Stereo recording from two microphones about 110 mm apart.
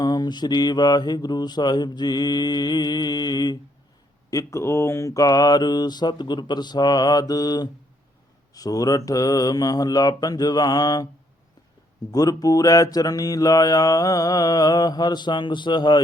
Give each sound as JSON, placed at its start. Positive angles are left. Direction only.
{"t": 0.0, "sound": "mantra", "side_deg": 40}
{"t": 12.1, "sound": "mantra", "side_deg": 35}